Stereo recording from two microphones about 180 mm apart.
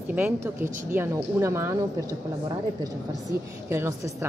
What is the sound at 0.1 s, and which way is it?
Speech, 10° right (ahead or behind).